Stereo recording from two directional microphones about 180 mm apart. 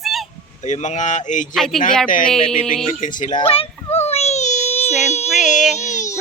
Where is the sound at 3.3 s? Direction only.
30° left (ahead or behind).